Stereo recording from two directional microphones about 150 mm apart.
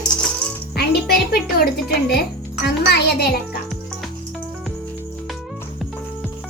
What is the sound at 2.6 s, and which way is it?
Speech, 90° left.